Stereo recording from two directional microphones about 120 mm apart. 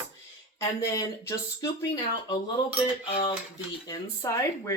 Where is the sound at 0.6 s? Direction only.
25° left (ahead or behind).